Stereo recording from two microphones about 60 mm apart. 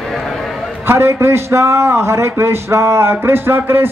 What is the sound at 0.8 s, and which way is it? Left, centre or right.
A man's voice, right.